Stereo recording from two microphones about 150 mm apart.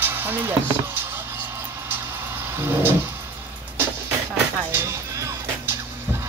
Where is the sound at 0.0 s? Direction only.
15° right (ahead or behind).